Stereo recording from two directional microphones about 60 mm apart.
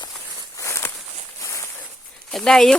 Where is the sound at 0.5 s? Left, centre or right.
Left.